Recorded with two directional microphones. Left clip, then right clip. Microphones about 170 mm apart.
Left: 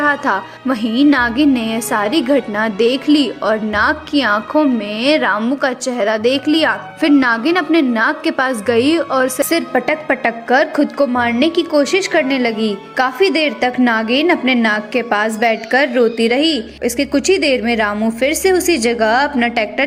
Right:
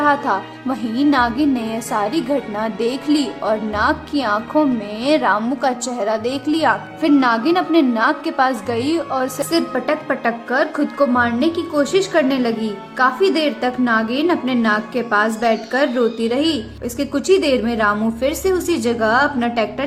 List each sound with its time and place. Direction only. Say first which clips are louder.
0.0 s a woman's voice: left 1 dB; 10° left (ahead or behind)